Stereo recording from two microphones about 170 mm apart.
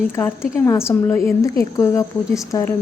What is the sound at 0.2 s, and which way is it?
A woman's voice, 10° left (ahead or behind).